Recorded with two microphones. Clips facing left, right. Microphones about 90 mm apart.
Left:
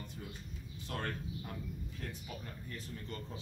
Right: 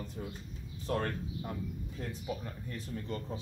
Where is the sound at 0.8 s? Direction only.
30° right (ahead or behind).